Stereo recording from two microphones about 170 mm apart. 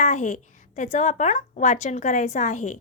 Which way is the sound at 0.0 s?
45° left (ahead or behind).